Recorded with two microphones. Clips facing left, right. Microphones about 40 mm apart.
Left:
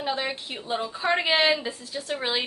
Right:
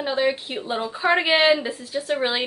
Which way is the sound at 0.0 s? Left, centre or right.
Centre.